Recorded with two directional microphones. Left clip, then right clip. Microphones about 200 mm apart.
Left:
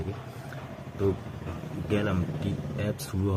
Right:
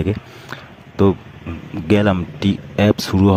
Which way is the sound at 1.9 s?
55° right (ahead or behind).